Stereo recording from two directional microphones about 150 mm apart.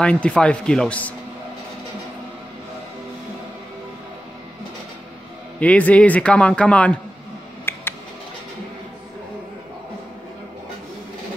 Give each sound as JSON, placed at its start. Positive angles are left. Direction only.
{"t": 0.0, "sound": "a man's voice", "side_deg": 5}
{"t": 5.6, "sound": "a man's voice", "side_deg": 10}
{"t": 7.7, "sound": "a sound", "side_deg": 15}